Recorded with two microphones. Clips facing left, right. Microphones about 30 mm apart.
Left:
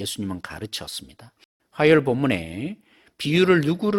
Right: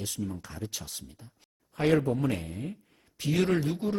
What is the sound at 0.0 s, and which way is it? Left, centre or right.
Speech, left.